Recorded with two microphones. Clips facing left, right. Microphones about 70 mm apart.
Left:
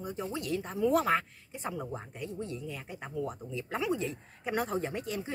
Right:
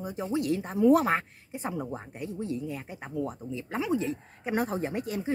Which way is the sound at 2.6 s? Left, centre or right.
Right.